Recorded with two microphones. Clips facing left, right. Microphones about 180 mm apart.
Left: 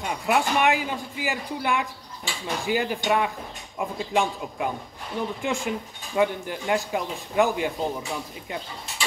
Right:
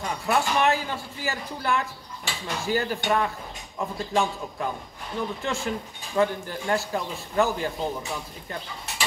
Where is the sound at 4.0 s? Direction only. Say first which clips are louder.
Left 1 dB; 15° left (ahead or behind).